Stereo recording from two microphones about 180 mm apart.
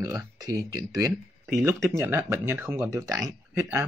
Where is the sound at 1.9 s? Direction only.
15° right (ahead or behind).